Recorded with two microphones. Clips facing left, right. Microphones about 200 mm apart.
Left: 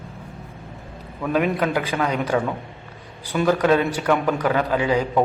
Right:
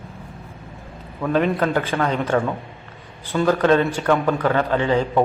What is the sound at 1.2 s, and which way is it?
A man's voice, 10° left (ahead or behind).